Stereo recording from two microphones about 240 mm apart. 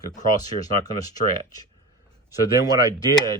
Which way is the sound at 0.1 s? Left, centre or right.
Centre.